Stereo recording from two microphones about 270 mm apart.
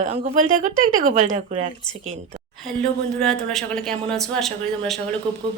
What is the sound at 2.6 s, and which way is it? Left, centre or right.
Speech, centre.